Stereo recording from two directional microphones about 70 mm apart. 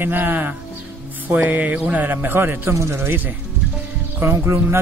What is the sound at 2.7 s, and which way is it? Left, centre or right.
Speech, right.